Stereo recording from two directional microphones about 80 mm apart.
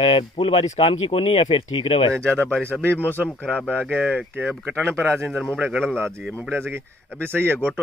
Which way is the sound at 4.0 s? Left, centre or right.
Centre.